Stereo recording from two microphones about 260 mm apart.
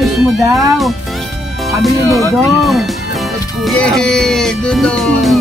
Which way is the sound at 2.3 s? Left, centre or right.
Centre.